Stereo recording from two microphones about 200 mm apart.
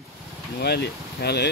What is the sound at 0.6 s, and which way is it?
Speech, 55° left (ahead or behind).